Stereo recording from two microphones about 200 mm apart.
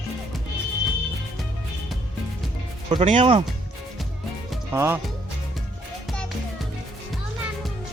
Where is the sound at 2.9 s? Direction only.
30° right (ahead or behind).